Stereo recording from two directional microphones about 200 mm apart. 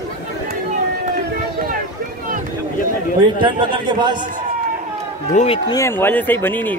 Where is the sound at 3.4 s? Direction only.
20° right (ahead or behind).